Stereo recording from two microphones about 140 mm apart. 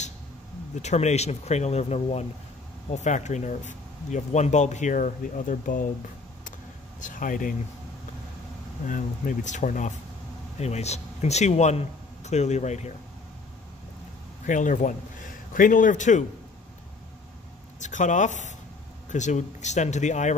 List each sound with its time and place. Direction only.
0.8 s speech: 50° left (ahead or behind); by 5.9 s 70° left (ahead or behind)
7.0 s speech: 70° left (ahead or behind)
8.8 s speech: 70° left (ahead or behind)
10.6 s speech: 50° left (ahead or behind)
14.4 s a man's voice: 65° left (ahead or behind)
17.7 s speech: 60° left (ahead or behind)